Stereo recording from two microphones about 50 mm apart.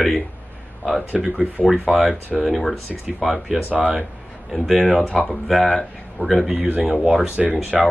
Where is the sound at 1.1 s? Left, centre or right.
Centre.